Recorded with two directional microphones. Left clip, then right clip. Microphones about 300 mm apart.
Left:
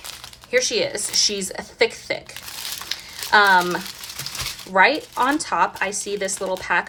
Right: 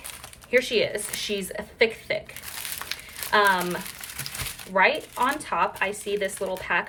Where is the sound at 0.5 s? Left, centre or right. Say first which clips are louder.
Left 2 dB; centre.